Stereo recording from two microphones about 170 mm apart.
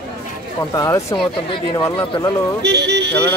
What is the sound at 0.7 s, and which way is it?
Speech, 20° left (ahead or behind).